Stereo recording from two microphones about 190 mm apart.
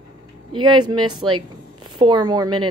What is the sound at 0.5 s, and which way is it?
A woman's voice, 25° right (ahead or behind).